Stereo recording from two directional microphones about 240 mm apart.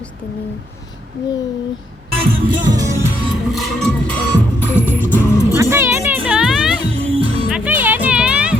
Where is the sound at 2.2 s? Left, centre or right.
Right.